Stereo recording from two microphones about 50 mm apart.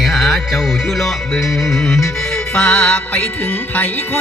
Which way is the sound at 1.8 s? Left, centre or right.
Centre.